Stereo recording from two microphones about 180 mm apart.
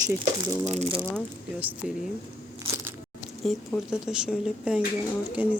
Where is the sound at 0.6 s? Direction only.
35° right (ahead or behind).